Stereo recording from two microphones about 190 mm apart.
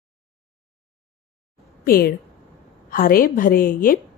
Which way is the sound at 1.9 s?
50° left (ahead or behind).